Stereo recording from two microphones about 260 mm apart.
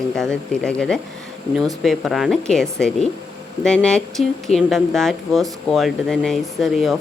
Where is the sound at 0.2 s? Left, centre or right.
Centre.